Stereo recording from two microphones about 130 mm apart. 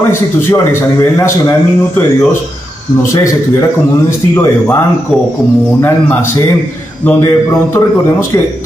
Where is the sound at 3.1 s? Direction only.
25° left (ahead or behind).